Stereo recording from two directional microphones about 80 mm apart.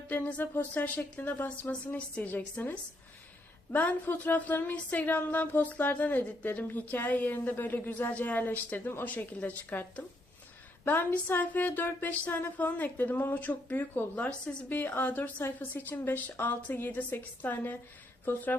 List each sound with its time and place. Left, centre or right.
0.1 s speech: centre